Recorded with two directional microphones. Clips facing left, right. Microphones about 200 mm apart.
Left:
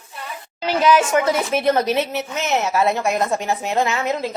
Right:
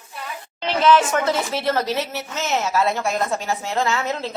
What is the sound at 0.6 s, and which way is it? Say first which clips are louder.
A woman's voice: left 1 dB; 10° left (ahead or behind).